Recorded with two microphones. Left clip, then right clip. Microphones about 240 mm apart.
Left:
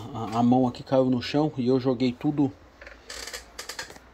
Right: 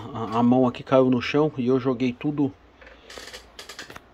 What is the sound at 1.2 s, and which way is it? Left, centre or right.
Speech, centre.